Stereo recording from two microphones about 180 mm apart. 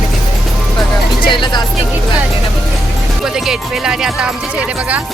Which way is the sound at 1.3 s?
25° left (ahead or behind).